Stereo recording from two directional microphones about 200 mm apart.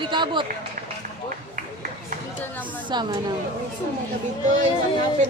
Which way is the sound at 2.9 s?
20° right (ahead or behind).